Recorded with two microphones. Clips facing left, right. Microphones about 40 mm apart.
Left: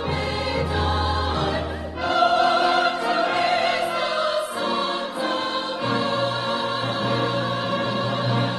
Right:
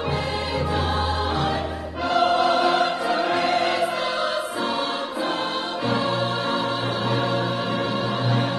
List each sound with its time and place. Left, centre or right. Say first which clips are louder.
2.0 s music: left 1 dB; centre